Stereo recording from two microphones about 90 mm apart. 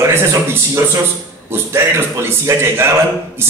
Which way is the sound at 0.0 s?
30° right (ahead or behind).